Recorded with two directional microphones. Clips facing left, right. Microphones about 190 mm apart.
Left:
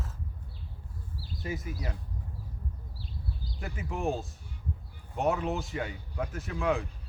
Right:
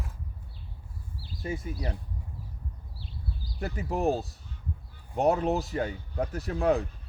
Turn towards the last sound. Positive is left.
turn(degrees=-40)  # may be behind; listen again after turning